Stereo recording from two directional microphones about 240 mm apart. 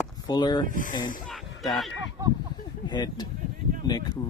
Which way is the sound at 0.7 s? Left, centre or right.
Left.